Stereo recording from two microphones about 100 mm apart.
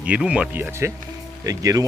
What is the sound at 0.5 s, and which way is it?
Speech, 25° right (ahead or behind).